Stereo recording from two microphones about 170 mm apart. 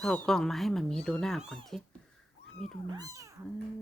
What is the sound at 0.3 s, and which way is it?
Speech, 5° left (ahead or behind).